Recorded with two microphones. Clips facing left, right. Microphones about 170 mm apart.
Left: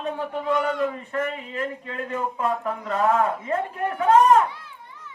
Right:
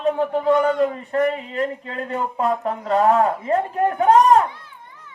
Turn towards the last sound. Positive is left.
turn(degrees=-35)  # may be behind; listen again after turning